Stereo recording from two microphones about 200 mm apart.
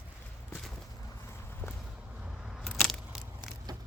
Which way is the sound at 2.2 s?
5° right (ahead or behind).